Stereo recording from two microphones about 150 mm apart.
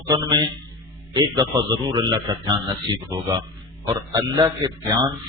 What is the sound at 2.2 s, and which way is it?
A man's voice, 30° right (ahead or behind).